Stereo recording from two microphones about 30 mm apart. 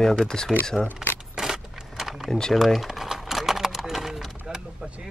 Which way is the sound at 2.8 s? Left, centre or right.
Centre.